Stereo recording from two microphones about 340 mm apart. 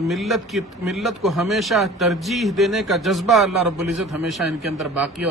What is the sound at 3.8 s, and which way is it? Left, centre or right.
Speech, right.